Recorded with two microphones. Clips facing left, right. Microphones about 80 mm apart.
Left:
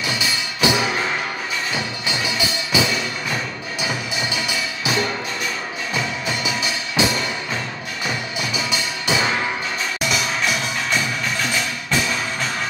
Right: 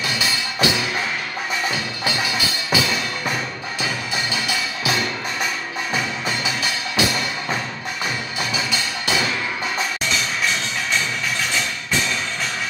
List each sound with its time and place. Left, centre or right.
0.6 s music: left
2.0 s music: left
6.4 s music: left
8.6 s music: left